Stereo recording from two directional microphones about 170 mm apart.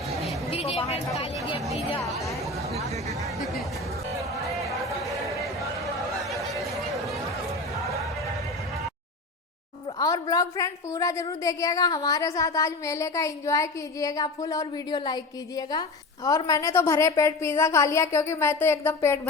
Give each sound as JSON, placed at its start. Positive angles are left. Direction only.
{"t": 0.5, "sound": "a sound", "side_deg": 35}
{"t": 3.3, "sound": "music", "side_deg": 0}
{"t": 5.8, "sound": "chatter", "side_deg": 0}
{"t": 10.0, "sound": "a woman's voice", "side_deg": 20}